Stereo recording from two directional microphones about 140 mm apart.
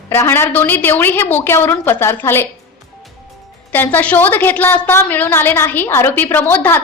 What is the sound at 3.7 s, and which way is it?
A woman's voice, 15° left (ahead or behind).